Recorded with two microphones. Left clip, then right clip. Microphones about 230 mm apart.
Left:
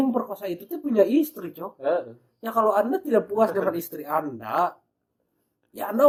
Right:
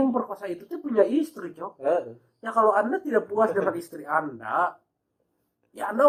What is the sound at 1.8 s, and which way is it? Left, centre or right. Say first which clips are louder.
Speech: even; centre.